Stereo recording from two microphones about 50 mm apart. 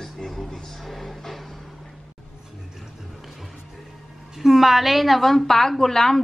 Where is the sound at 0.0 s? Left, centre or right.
Centre.